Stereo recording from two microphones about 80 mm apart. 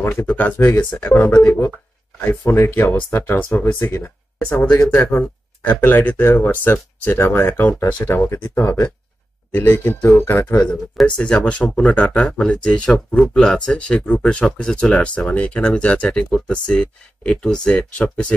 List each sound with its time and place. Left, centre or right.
0.0 s speech: left
10.7 s speech: centre